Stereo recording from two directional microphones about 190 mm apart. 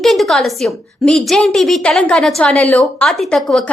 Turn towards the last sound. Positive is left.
turn(degrees=0)  # may be behind; listen again after turning